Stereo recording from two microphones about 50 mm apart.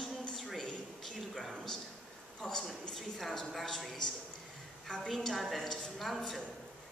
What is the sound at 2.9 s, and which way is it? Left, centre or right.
A woman's voice, centre.